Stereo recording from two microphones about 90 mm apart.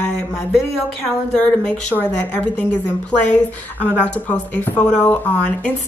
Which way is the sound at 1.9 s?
20° left (ahead or behind).